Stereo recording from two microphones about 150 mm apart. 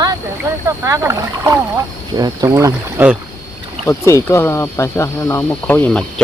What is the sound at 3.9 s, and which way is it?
Speech, 20° left (ahead or behind).